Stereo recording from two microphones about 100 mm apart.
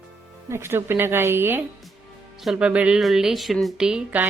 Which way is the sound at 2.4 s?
5° right (ahead or behind).